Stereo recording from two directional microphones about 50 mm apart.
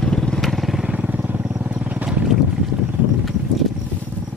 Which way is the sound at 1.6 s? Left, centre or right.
Right.